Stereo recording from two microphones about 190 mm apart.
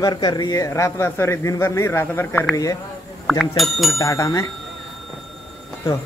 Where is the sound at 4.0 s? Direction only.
15° left (ahead or behind).